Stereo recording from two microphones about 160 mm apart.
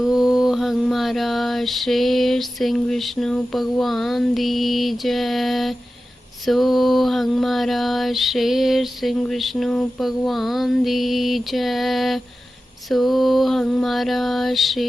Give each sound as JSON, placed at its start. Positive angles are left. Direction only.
{"t": 0.0, "sound": "mantra", "side_deg": -5}